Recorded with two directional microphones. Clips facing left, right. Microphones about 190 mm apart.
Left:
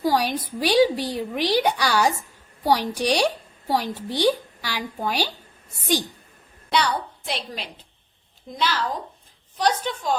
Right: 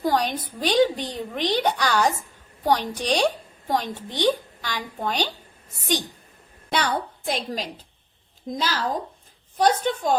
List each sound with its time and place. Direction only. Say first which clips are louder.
0.0 s a woman's voice: left 1 dB; 10° left (ahead or behind)
6.7 s a woman's voice: left 1 dB; 45° right (ahead or behind)